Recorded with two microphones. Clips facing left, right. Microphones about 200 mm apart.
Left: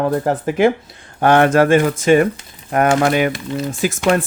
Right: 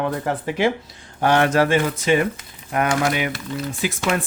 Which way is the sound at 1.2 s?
55° left (ahead or behind).